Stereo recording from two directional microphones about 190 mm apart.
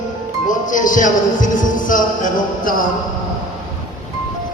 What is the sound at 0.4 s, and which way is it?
Speech, 45° left (ahead or behind).